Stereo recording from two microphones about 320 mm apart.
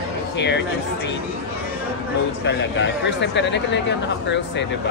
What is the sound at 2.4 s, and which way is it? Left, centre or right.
Speech, left.